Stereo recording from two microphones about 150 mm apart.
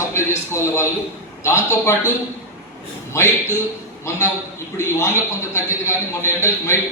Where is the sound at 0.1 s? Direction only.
20° left (ahead or behind).